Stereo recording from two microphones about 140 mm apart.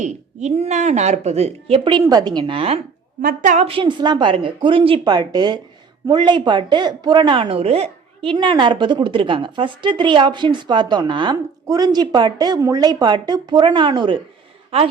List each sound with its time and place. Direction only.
0.0 s a woman's voice: 55° right (ahead or behind)
3.2 s a woman's voice: 70° right (ahead or behind)
3.7 s a woman's voice: 35° right (ahead or behind)